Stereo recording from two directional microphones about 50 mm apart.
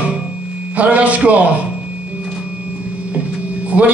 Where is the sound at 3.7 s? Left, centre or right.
Right.